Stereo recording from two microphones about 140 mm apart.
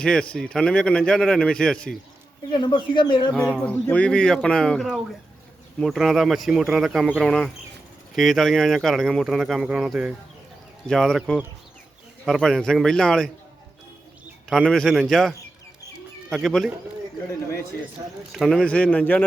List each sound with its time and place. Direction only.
0.0 s a man's voice: 5° left (ahead or behind)
2.5 s speech: 35° left (ahead or behind)
3.3 s a man's voice: 10° left (ahead or behind)
14.5 s speech: centre (ahead or behind)
16.3 s speech: 5° left (ahead or behind)
18.3 s a man's voice: centre (ahead or behind)